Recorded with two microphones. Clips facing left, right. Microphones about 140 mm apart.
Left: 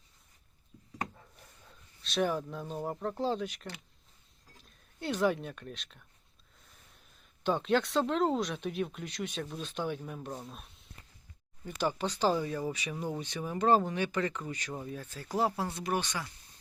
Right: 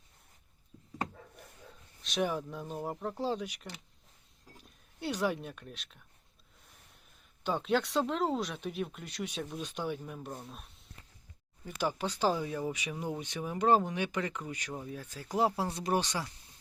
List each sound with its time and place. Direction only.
2.0 s speech: 15° right (ahead or behind)
4.9 s speech: 10° right (ahead or behind)
7.4 s speech: 5° right (ahead or behind); by 16.3 s 30° right (ahead or behind)